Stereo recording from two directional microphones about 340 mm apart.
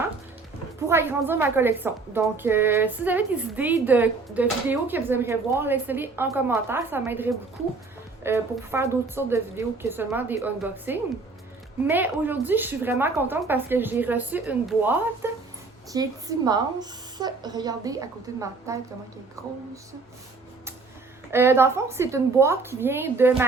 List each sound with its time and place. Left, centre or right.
0.9 s a woman's voice: centre
21.2 s a woman's voice: centre